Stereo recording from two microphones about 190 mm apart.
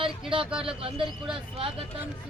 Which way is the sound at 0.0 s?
25° right (ahead or behind).